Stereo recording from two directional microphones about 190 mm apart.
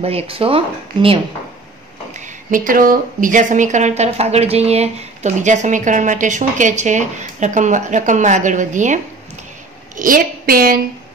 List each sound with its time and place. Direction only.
0.0 s speech: 30° right (ahead or behind)
2.1 s a woman's voice: 40° right (ahead or behind)